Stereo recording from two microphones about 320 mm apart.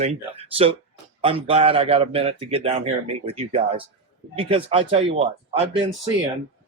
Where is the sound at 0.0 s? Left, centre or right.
Centre.